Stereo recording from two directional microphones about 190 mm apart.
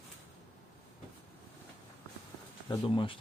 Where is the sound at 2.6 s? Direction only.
25° left (ahead or behind).